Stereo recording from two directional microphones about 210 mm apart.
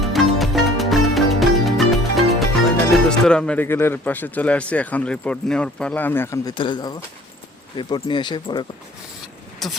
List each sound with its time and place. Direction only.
0.0 s music: centre (ahead or behind)
2.9 s speech: 5° left (ahead or behind); by 8.6 s 20° left (ahead or behind)
9.6 s speech: centre (ahead or behind)